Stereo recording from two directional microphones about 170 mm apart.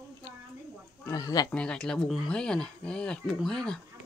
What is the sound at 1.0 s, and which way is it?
Speech, 20° left (ahead or behind).